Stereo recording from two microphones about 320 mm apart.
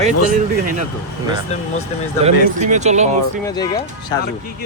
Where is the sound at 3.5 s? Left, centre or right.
Centre.